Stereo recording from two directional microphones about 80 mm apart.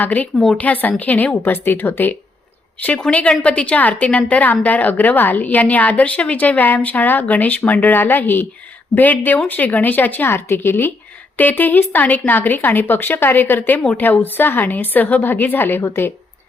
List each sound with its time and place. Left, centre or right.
0.0 s a woman's voice: left
0.3 s a woman's voice: centre
0.6 s a woman's voice: left